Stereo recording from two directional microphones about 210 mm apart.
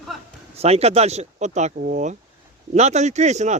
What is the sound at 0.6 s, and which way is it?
Speech, 30° right (ahead or behind).